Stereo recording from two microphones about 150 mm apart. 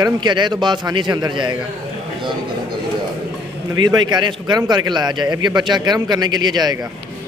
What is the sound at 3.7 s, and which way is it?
A man's voice, 25° right (ahead or behind).